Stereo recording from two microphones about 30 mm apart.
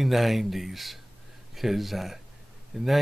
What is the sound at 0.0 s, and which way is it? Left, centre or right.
Speech, centre.